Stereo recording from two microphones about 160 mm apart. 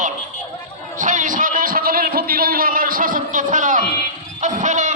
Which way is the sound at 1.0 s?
50° right (ahead or behind).